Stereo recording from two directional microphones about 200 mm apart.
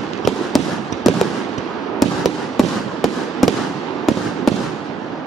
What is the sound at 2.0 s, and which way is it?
Fireworks, centre (ahead or behind).